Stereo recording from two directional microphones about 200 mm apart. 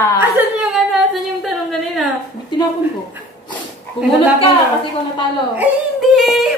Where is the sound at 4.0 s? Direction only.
30° left (ahead or behind).